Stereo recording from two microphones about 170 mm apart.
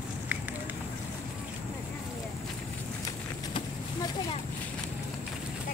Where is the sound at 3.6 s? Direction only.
30° left (ahead or behind).